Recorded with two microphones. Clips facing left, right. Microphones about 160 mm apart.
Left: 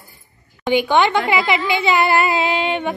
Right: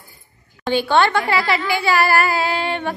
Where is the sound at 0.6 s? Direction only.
15° left (ahead or behind).